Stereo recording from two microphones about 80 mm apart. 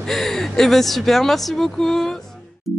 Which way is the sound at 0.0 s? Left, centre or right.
Centre.